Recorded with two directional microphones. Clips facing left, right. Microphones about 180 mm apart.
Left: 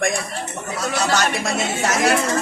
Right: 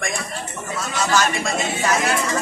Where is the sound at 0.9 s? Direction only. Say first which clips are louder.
Even; 70° left (ahead or behind).